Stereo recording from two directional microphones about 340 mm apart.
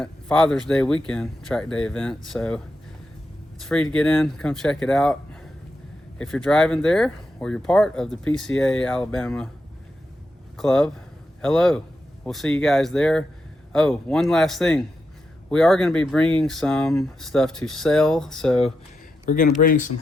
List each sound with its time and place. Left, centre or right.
0.0 s speech: centre
3.6 s speech: centre
10.6 s speech: centre
19.2 s speech: left